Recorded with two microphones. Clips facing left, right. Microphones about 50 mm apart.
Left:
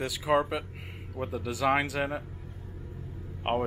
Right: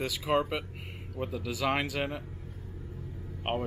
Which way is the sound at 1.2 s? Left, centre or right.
Left.